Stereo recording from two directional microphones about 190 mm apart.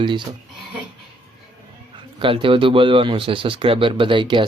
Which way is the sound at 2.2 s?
25° right (ahead or behind).